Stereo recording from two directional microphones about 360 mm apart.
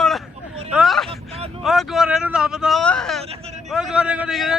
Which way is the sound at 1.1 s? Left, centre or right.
Centre.